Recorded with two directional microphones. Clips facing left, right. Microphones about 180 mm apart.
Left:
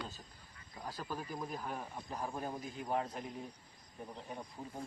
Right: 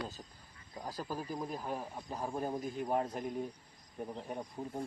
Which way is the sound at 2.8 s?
45° right (ahead or behind).